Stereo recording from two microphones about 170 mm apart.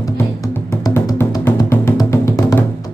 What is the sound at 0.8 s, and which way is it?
Music, 20° left (ahead or behind).